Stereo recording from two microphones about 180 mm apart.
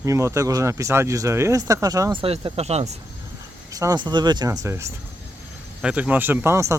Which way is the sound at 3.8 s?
20° right (ahead or behind).